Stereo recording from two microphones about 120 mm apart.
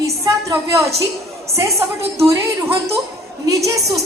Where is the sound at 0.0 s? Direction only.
25° right (ahead or behind).